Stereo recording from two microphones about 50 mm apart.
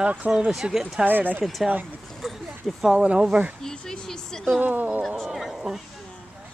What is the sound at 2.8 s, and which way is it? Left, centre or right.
Speech, centre.